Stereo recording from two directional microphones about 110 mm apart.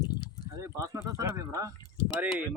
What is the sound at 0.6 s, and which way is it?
Speech, 25° right (ahead or behind).